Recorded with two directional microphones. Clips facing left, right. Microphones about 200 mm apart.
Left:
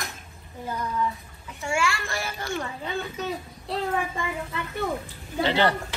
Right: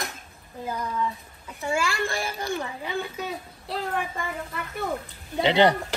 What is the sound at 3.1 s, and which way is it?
Speech, 5° right (ahead or behind).